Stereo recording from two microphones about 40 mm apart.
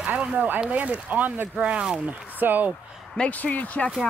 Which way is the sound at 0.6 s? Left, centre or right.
Right.